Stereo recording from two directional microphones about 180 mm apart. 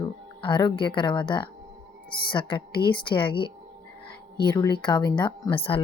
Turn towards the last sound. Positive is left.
turn(degrees=30)  # may be behind; listen again after turning